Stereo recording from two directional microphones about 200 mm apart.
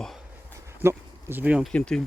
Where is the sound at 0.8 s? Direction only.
10° right (ahead or behind).